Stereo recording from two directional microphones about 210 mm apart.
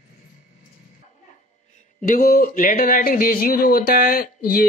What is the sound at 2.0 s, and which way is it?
Speech, 40° left (ahead or behind).